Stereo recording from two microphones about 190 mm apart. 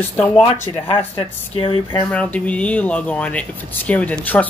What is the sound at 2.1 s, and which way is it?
Speech, 5° left (ahead or behind).